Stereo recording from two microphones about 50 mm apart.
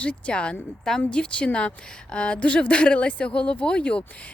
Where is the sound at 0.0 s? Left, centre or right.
Left.